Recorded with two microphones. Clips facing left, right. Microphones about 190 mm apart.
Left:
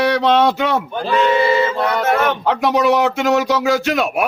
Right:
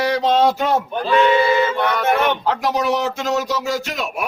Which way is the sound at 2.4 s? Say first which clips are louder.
Left 4 dB; 65° left (ahead or behind).